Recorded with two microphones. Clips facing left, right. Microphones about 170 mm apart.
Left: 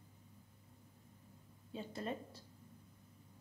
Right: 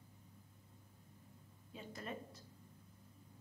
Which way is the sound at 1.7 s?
30° left (ahead or behind).